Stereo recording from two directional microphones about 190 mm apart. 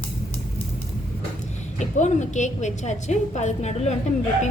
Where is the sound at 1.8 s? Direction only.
40° left (ahead or behind).